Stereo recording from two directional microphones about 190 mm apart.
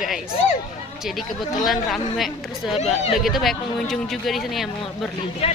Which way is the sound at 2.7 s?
35° left (ahead or behind).